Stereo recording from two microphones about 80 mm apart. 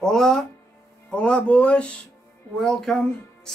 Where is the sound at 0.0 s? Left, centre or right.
Centre.